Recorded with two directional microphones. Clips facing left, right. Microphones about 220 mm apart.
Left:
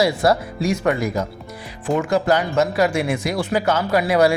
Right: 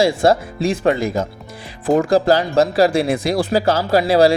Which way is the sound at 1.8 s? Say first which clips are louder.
Right 5 dB; 35° right (ahead or behind).